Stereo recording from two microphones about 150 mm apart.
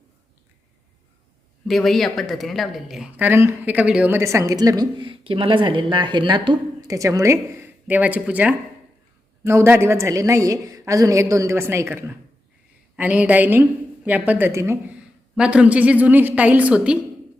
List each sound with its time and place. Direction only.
1.6 s speech: centre (ahead or behind); by 6.9 s 30° right (ahead or behind)
6.9 s a woman's voice: 20° right (ahead or behind)